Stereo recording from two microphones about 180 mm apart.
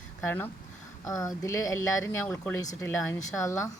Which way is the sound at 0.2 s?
10° left (ahead or behind).